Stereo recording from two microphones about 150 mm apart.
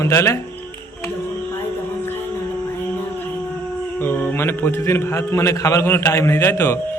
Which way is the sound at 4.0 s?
15° left (ahead or behind).